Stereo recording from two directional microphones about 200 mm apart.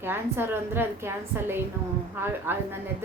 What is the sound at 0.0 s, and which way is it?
A woman's voice, 10° right (ahead or behind).